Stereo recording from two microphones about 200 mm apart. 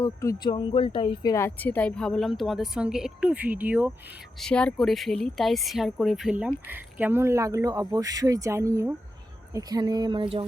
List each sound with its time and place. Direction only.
0.0 s speech: 15° left (ahead or behind); by 3.9 s 10° right (ahead or behind)
4.4 s speech: 5° left (ahead or behind); by 10.4 s 25° right (ahead or behind)